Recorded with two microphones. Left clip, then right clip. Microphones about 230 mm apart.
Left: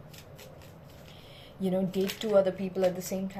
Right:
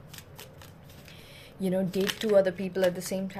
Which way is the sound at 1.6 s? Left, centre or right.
Right.